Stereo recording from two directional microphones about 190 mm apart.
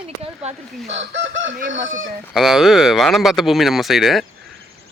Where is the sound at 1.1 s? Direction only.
70° right (ahead or behind).